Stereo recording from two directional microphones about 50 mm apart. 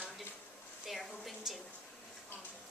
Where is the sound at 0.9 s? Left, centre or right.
Centre.